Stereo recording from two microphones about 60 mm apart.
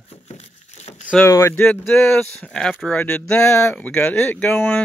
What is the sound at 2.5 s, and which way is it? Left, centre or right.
Speech, centre.